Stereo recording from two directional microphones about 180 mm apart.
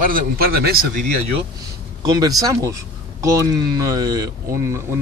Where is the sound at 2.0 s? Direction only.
20° right (ahead or behind).